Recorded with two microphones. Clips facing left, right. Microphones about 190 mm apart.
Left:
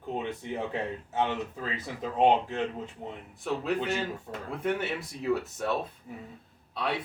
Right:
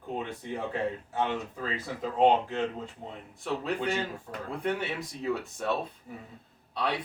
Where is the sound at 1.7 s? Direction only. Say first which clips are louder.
Right 3 dB; 20° left (ahead or behind).